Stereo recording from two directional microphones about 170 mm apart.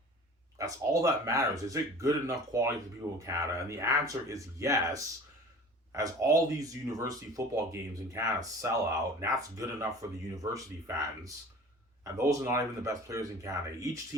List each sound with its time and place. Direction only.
0.6 s speech: 20° right (ahead or behind)